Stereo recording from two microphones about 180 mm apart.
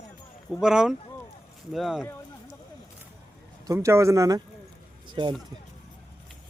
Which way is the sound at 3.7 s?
15° right (ahead or behind).